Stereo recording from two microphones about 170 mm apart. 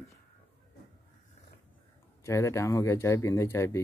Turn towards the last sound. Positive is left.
turn(degrees=15)  # may be behind; listen again after turning